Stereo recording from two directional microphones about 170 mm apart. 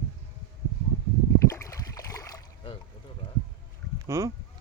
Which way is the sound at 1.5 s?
20° left (ahead or behind).